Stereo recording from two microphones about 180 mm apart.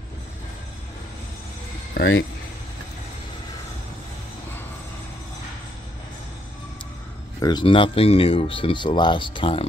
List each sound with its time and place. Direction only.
2.0 s speech: 90° left
7.4 s speech: 25° left (ahead or behind)